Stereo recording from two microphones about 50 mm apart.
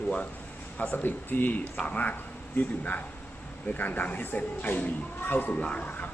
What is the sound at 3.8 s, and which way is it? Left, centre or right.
Speech, left.